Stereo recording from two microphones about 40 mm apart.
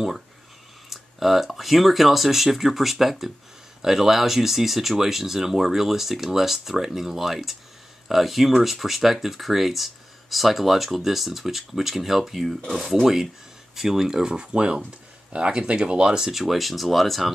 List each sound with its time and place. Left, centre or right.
0.8 s speech: centre
13.0 s speech: centre
16.3 s speech: centre